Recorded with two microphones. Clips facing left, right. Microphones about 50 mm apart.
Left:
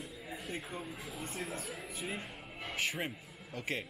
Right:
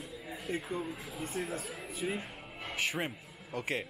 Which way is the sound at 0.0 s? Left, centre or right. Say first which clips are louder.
Right 2 dB; centre.